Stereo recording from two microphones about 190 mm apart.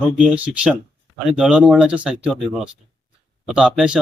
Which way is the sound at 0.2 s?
5° right (ahead or behind).